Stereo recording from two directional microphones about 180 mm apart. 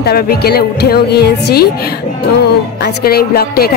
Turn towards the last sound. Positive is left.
turn(degrees=60)  # may be behind; listen again after turning